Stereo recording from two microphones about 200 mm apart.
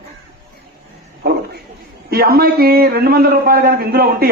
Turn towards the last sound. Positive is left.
turn(degrees=-50)  # may be behind; listen again after turning